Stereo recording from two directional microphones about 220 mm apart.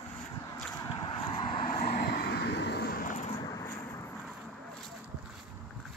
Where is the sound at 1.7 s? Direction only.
40° left (ahead or behind).